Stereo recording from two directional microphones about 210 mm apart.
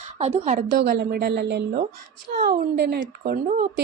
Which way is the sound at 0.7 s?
50° right (ahead or behind).